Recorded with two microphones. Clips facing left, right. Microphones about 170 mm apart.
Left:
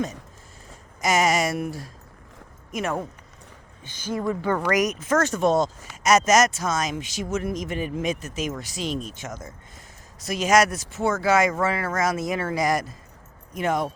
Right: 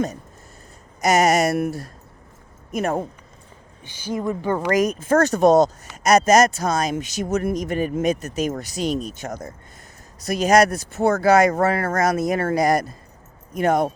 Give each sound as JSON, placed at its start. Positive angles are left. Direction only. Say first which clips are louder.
{"t": 1.2, "sound": "speech", "louder": "right 5 dB", "side_deg": -65}
{"t": 2.7, "sound": "speech", "louder": "right 4 dB", "side_deg": -35}
{"t": 3.8, "sound": "speech", "louder": "right 1 dB", "side_deg": -10}
{"t": 10.7, "sound": "speech", "louder": "right 5 dB", "side_deg": -60}
{"t": 11.2, "sound": "speech", "louder": "right 5 dB", "side_deg": -40}
{"t": 11.6, "sound": "speech", "louder": "right 4 dB", "side_deg": -50}
{"t": 12.3, "sound": "speech", "louder": "right 5 dB", "side_deg": -45}